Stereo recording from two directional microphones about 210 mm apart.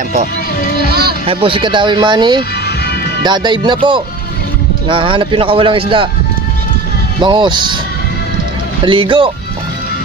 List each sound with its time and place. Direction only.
0.8 s speech: 50° right (ahead or behind)
1.2 s speech: 25° right (ahead or behind)
7.2 s speech: 20° right (ahead or behind)
8.8 s speech: 25° right (ahead or behind)